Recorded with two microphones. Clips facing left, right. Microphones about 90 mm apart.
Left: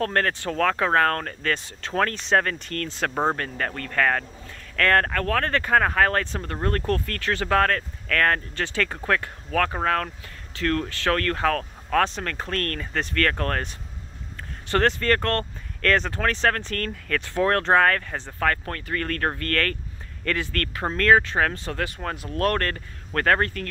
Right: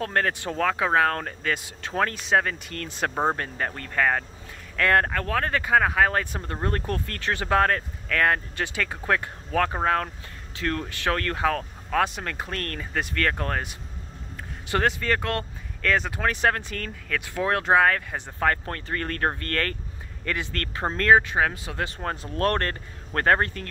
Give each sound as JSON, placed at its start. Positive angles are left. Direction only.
{"t": 0.0, "sound": "speech", "side_deg": -10}
{"t": 21.7, "sound": "speech", "side_deg": -30}